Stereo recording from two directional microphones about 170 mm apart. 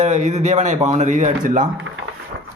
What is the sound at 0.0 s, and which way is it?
A man's voice, 45° right (ahead or behind).